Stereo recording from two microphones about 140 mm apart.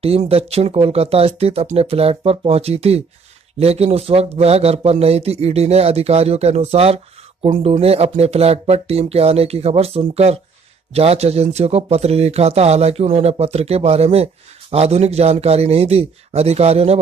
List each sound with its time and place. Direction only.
0.0 s speech: 45° right (ahead or behind)